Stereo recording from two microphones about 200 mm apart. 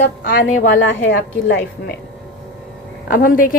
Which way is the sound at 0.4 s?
75° left (ahead or behind).